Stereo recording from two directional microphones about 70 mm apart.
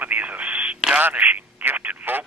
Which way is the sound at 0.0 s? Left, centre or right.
Right.